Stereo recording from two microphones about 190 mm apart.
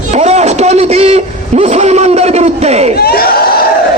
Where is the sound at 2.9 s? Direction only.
55° left (ahead or behind).